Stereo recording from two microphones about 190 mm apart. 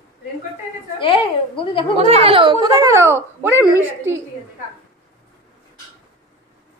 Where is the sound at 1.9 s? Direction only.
35° right (ahead or behind); by 3.2 s 15° right (ahead or behind).